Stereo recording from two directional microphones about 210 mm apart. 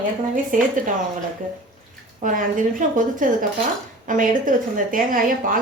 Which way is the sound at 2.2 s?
40° right (ahead or behind).